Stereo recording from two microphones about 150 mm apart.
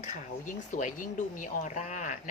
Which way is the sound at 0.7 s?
55° left (ahead or behind).